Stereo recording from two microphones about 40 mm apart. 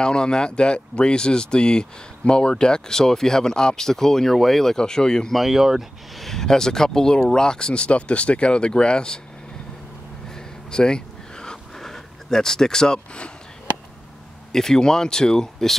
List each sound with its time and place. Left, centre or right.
0.0 s speech: left
5.3 s speech: centre
6.1 s speech: centre
10.3 s a sound: centre
11.8 s speech: centre
14.5 s speech: centre